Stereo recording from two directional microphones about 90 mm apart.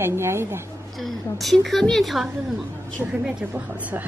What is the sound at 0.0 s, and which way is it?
Speech, 30° right (ahead or behind).